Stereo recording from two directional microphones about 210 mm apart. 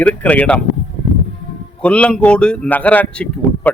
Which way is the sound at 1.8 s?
5° left (ahead or behind).